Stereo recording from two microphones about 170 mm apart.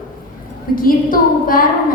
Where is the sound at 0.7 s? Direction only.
55° left (ahead or behind).